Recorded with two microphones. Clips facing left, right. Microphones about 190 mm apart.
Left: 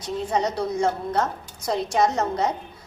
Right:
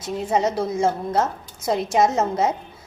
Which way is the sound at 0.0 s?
25° right (ahead or behind).